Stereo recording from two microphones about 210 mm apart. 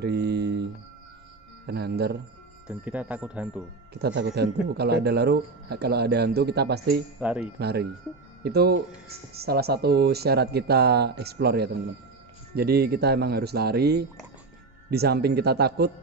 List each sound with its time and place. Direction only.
0.0 s a sound: 50° right (ahead or behind)
1.7 s speech: 50° right (ahead or behind)
2.7 s speech: 5° right (ahead or behind)
3.9 s speech: 50° right (ahead or behind)
7.2 s speech: 5° right (ahead or behind)
7.5 s speech: 50° right (ahead or behind)